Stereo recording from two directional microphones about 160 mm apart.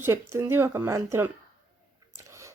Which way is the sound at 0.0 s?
15° right (ahead or behind).